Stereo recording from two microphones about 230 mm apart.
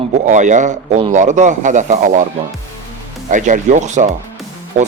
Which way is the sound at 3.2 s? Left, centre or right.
Right.